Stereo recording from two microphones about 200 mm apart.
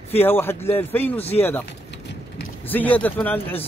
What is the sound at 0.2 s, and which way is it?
Speech, 10° left (ahead or behind).